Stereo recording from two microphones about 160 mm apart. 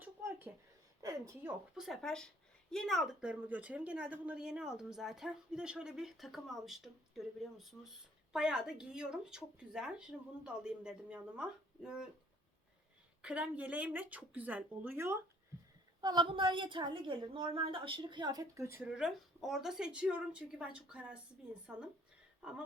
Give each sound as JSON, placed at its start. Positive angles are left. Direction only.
{"t": 0.0, "sound": "a sound", "side_deg": -15}
{"t": 1.0, "sound": "speech", "side_deg": -20}
{"t": 1.7, "sound": "speech", "side_deg": 0}
{"t": 13.2, "sound": "speech", "side_deg": -5}
{"t": 16.0, "sound": "a woman's voice", "side_deg": -30}
{"t": 18.9, "sound": "speech", "side_deg": -5}